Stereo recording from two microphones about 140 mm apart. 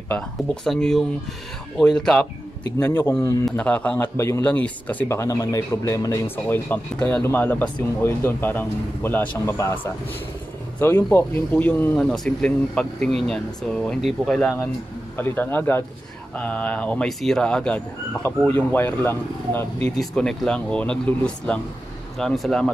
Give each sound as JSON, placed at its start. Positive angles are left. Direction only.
{"t": 0.7, "sound": "speech", "side_deg": 5}
{"t": 2.8, "sound": "speech", "side_deg": 15}
{"t": 15.1, "sound": "speech", "side_deg": 15}
{"t": 20.0, "sound": "speech", "side_deg": 5}